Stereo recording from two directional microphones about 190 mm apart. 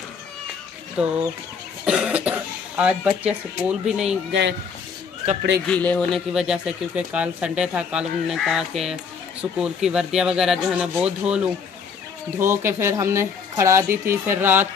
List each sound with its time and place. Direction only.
1.0 s speech: 5° right (ahead or behind)
4.3 s speech: 70° right (ahead or behind)
5.7 s speech: 5° left (ahead or behind)
12.4 s speech: 15° right (ahead or behind)